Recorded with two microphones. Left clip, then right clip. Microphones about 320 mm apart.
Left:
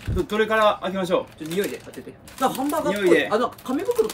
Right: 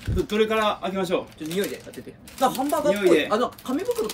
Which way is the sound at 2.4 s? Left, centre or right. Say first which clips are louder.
Right 1 dB; centre.